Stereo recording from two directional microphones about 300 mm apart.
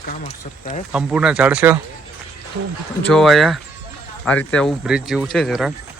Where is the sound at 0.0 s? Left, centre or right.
Left.